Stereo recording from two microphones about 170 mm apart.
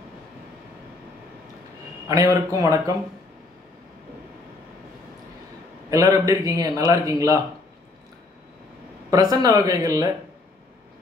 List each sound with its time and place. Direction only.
2.0 s speech: 20° right (ahead or behind)
5.9 s speech: 20° right (ahead or behind)
9.1 s speech: 20° right (ahead or behind)